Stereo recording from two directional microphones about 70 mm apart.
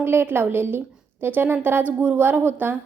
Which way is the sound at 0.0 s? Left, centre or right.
Right.